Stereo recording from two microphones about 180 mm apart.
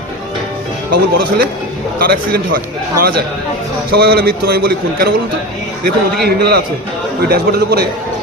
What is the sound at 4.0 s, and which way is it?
A man's voice, 60° right (ahead or behind).